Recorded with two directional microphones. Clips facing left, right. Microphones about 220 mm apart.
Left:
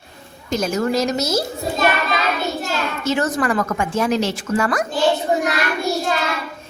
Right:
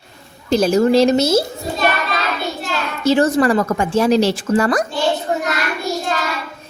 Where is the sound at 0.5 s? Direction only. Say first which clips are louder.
Right 7 dB; 30° right (ahead or behind).